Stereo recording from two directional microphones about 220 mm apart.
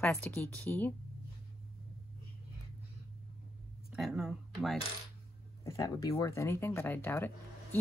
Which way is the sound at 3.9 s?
Centre (ahead or behind).